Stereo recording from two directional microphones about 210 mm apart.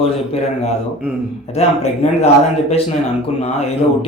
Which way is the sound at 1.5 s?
30° left (ahead or behind).